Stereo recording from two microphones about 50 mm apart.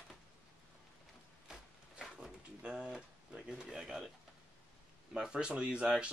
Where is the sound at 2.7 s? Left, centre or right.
Centre.